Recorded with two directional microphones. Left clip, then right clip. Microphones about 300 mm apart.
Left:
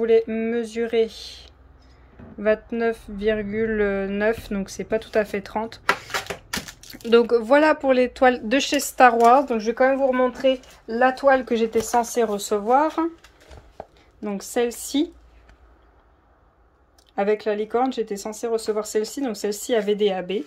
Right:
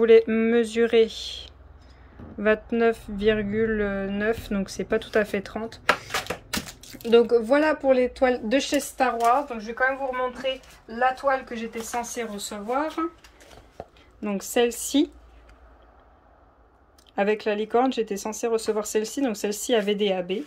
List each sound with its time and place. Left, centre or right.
0.0 s speech: centre
6.9 s speech: centre
9.2 s speech: left
12.0 s speech: centre
14.2 s speech: centre
17.1 s speech: centre